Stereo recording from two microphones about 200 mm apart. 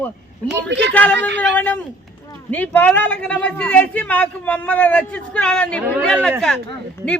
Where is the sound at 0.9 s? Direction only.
5° left (ahead or behind).